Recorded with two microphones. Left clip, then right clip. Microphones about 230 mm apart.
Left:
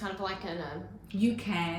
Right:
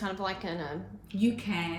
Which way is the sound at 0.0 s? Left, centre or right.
Right.